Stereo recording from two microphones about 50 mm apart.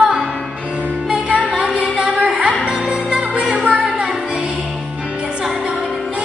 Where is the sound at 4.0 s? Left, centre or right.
Centre.